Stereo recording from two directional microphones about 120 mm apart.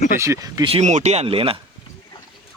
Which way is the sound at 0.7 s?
75° right (ahead or behind).